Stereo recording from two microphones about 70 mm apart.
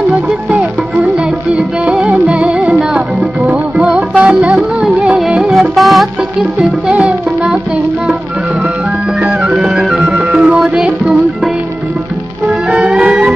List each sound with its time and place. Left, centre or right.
1.1 s music: centre
6.9 s music: centre
9.2 s music: centre
10.6 s music: centre
12.6 s music: centre